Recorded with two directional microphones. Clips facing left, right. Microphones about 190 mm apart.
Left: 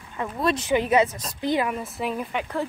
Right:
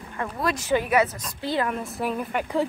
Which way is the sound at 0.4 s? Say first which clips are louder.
Left 2 dB; 25° left (ahead or behind).